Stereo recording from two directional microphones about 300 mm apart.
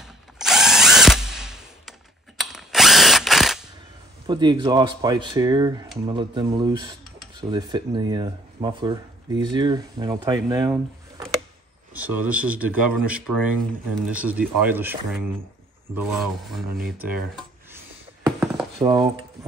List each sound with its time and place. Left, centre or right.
0.0 s drill: centre
4.3 s speech: centre
15.9 s a sound: centre